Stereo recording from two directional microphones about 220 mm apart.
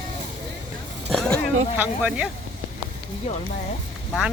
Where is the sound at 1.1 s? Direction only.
Centre (ahead or behind).